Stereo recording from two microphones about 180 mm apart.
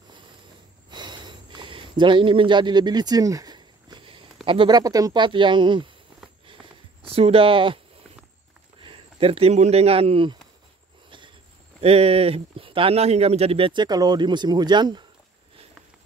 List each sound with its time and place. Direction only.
0.8 s sniff: 25° right (ahead or behind)
4.5 s speech: 25° right (ahead or behind)
7.0 s speech: 30° right (ahead or behind)
8.8 s speech: 30° right (ahead or behind)
11.1 s a sound: 25° right (ahead or behind)
11.8 s speech: 35° right (ahead or behind)